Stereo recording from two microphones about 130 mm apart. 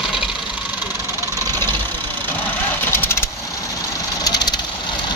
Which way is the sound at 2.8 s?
15° left (ahead or behind).